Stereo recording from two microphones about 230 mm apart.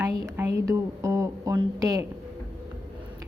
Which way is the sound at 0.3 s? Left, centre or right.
Centre.